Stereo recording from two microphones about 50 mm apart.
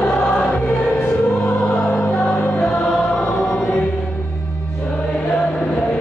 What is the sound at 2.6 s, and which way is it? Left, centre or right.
Choir, centre.